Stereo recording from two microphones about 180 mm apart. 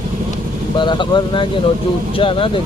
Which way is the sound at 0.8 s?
25° left (ahead or behind).